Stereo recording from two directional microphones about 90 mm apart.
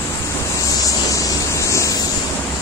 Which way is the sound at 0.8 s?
40° left (ahead or behind).